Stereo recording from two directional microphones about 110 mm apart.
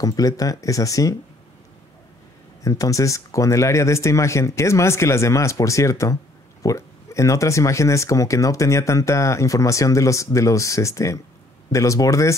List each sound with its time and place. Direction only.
0.0 s speech: 35° left (ahead or behind)
2.6 s speech: 30° left (ahead or behind)